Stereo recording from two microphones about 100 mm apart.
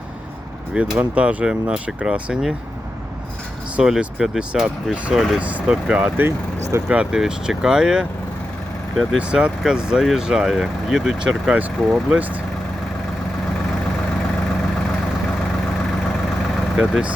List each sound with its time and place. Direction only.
0.9 s speech: 10° right (ahead or behind)
3.8 s speech: 5° right (ahead or behind)
5.4 s speech: 15° right (ahead or behind)
6.2 s speech: 25° right (ahead or behind)
6.8 s speech: 10° right (ahead or behind)
9.1 s speech: 10° right (ahead or behind)
16.7 s speech: centre (ahead or behind)